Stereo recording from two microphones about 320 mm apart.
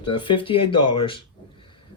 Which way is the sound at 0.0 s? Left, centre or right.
Centre.